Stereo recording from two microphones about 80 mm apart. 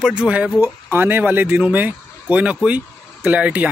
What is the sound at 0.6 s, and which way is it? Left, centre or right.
A man's voice, right.